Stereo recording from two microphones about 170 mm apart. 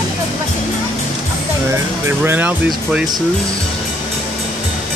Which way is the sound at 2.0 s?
15° right (ahead or behind).